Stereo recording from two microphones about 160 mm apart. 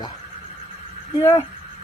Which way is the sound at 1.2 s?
15° left (ahead or behind).